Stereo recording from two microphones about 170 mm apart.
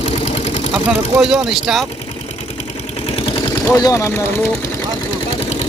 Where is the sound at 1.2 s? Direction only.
Centre (ahead or behind).